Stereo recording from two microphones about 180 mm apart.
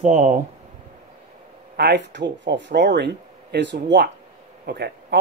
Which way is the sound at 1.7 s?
70° right (ahead or behind).